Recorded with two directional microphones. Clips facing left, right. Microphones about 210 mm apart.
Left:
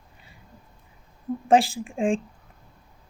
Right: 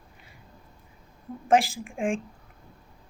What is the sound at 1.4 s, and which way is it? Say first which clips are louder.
Speech: left 2 dB; 30° left (ahead or behind).